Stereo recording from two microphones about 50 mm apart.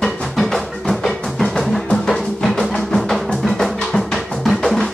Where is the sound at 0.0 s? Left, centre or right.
Centre.